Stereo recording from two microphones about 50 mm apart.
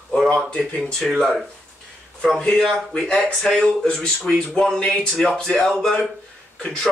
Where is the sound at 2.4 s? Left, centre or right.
Centre.